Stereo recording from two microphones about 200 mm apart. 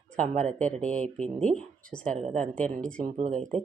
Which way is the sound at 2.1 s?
30° right (ahead or behind).